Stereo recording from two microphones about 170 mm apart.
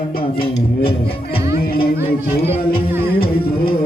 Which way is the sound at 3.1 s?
60° left (ahead or behind).